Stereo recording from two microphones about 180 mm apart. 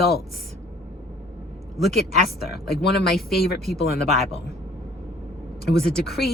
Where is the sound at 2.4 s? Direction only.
60° left (ahead or behind).